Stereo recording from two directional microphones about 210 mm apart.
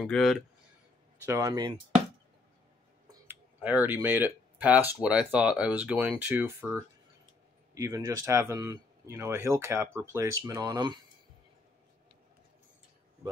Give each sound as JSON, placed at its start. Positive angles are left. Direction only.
{"t": 0.0, "sound": "speech", "side_deg": 0}
{"t": 1.2, "sound": "speech", "side_deg": -15}
{"t": 3.1, "sound": "a sound", "side_deg": -10}
{"t": 5.0, "sound": "speech", "side_deg": -5}